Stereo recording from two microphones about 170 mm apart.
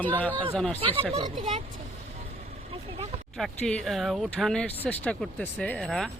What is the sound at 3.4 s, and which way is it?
Speech, centre (ahead or behind).